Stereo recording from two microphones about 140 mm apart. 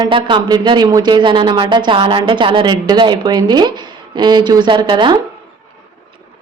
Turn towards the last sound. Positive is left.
turn(degrees=-35)  # may be behind; listen again after turning